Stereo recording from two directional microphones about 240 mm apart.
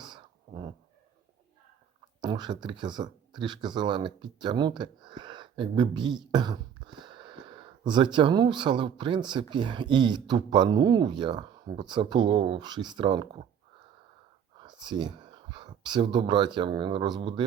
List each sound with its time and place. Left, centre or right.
0.0 s a sound: centre
2.2 s a man's voice: centre
14.6 s speech: centre